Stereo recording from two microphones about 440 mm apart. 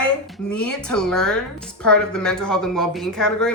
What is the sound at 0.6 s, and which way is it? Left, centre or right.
Speech, left.